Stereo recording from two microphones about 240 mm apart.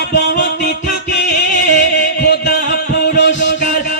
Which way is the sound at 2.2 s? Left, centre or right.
Left.